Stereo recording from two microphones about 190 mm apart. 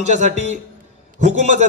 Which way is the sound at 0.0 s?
35° right (ahead or behind).